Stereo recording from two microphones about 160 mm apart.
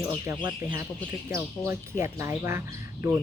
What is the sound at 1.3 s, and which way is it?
Speech, 15° right (ahead or behind).